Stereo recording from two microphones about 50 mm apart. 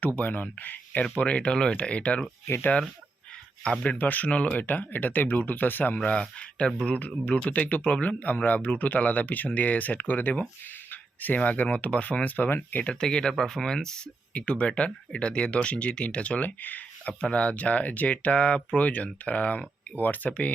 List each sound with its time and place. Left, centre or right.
0.2 s speech: left
3.8 s speech: left
6.0 s speech: left
12.8 s speech: centre
14.3 s speech: left
17.2 s speech: centre